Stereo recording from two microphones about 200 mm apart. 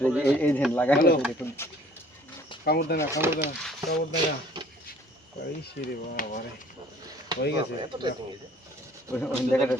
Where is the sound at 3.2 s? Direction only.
10° right (ahead or behind).